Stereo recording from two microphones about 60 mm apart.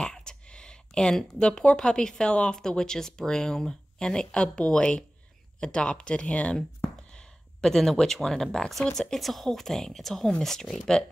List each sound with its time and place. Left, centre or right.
0.0 s speech: centre